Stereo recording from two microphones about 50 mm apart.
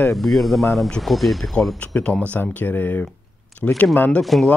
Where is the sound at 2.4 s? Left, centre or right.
Left.